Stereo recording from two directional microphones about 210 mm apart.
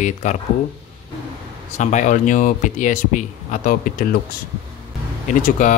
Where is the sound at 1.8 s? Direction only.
35° left (ahead or behind).